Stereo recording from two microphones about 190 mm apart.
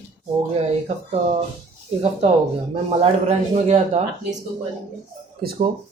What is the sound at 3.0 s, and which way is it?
A man's voice, 35° right (ahead or behind).